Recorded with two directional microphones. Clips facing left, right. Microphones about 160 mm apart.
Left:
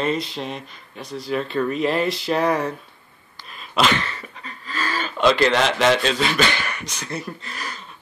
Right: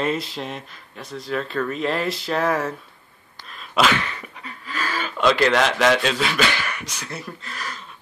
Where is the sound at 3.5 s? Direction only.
Centre (ahead or behind).